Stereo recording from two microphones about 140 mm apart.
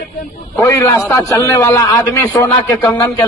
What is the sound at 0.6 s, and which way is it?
A man's voice, 15° left (ahead or behind).